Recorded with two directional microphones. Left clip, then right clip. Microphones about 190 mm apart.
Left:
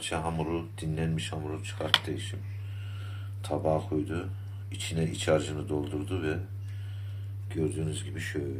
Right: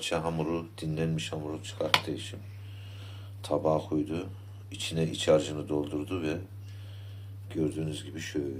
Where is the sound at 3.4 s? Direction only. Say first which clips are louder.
Right 1 dB; centre (ahead or behind).